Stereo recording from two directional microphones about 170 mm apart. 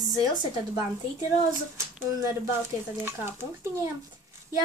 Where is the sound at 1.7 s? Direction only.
15° right (ahead or behind).